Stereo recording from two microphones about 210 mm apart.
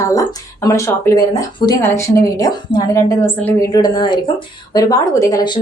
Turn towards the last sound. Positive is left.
turn(degrees=20)  # may be behind; listen again after turning